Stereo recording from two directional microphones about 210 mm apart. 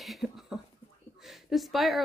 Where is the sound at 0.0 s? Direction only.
Centre (ahead or behind).